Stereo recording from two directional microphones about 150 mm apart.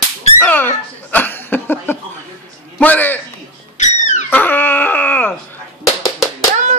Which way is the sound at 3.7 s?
50° left (ahead or behind).